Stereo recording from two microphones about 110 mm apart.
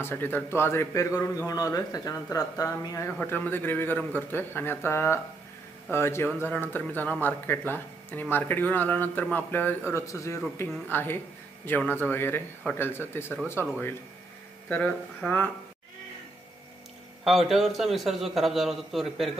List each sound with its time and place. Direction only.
0.0 s speech: 20° left (ahead or behind)
1.1 s speech: 35° left (ahead or behind)
3.2 s speech: 15° left (ahead or behind)
14.7 s speech: 15° left (ahead or behind)
17.2 s a man's voice: centre (ahead or behind)